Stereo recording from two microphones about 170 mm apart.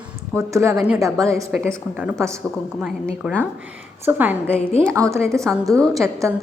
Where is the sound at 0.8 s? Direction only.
5° right (ahead or behind).